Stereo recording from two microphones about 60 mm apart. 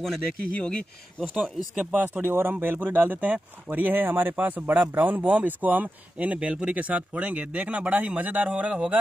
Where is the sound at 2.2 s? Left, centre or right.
Right.